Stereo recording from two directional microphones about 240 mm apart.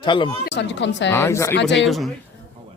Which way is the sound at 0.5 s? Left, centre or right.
Left.